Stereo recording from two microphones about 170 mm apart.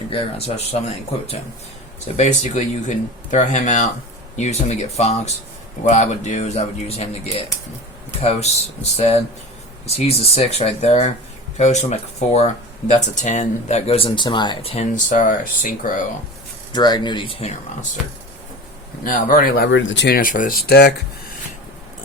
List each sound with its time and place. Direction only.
0.1 s speech: 35° left (ahead or behind)
14.9 s speech: 50° left (ahead or behind)
16.7 s speech: 25° left (ahead or behind)
19.0 s speech: 50° left (ahead or behind); by 20.9 s 70° left (ahead or behind)